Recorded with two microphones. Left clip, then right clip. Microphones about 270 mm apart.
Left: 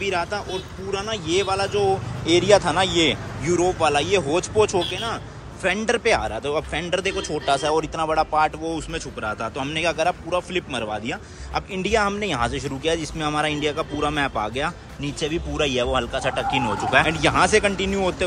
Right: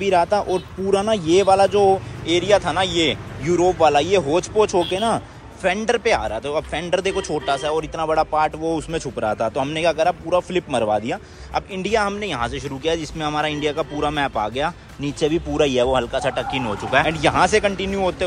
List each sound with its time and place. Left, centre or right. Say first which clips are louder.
0.0 s speech: right 7 dB; centre
2.2 s speech: left 1 dB; centre